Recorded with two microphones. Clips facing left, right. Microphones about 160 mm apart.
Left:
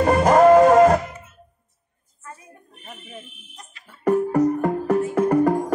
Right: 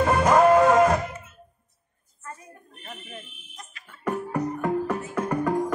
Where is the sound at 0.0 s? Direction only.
40° left (ahead or behind).